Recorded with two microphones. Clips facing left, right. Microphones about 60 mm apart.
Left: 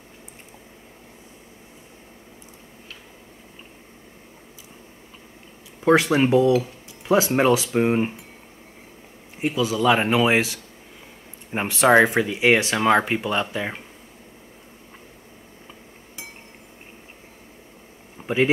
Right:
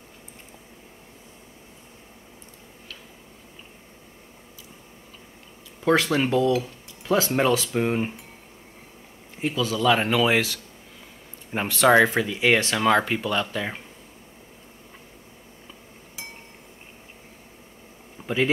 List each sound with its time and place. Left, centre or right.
5.9 s speech: centre
9.4 s speech: centre
18.2 s a sound: centre